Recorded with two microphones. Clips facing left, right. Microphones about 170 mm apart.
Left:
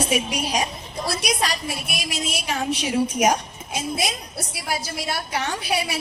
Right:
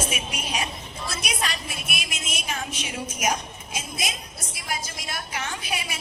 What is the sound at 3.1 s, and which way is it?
Speech, 65° left (ahead or behind).